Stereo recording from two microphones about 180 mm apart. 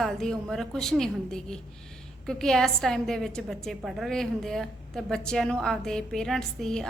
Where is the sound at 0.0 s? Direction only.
Centre (ahead or behind).